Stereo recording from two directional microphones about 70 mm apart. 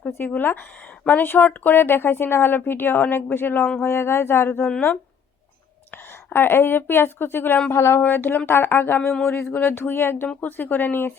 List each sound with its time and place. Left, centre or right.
0.2 s speech: left
6.3 s speech: left
9.0 s speech: centre
9.2 s speech: left